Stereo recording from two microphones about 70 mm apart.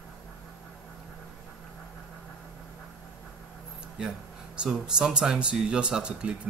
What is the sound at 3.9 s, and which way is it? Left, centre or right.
Speech, centre.